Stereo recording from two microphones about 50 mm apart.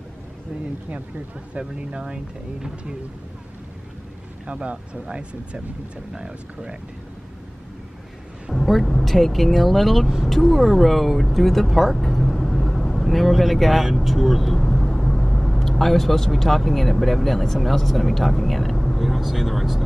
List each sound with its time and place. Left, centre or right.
1.6 s speech: centre
4.5 s speech: right
8.5 s a woman's voice: centre